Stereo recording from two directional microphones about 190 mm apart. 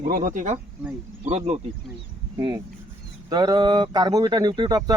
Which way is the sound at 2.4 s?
20° right (ahead or behind).